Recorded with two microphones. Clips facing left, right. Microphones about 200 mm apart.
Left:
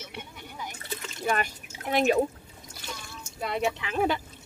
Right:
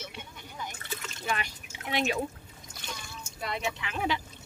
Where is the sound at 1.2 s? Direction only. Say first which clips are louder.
Left 7 dB; 45° left (ahead or behind).